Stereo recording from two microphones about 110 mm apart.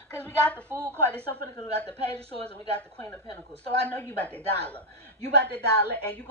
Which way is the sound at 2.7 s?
20° left (ahead or behind).